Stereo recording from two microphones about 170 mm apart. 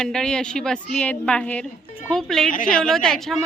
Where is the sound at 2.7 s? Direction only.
5° left (ahead or behind).